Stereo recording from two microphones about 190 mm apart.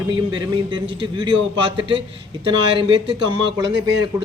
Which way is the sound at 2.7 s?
25° right (ahead or behind).